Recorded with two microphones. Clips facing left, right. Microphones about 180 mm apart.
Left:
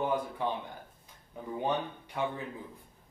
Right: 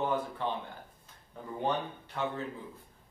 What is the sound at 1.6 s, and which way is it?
Speech, 15° left (ahead or behind).